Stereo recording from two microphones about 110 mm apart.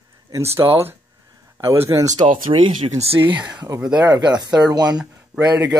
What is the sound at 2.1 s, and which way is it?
Speech, 50° right (ahead or behind).